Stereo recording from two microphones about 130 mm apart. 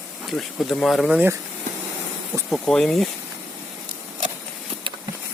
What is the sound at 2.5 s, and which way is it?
Speech, 5° left (ahead or behind).